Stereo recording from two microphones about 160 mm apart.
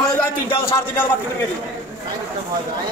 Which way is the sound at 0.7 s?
15° left (ahead or behind).